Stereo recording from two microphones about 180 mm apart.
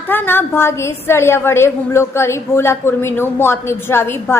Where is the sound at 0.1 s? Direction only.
10° left (ahead or behind).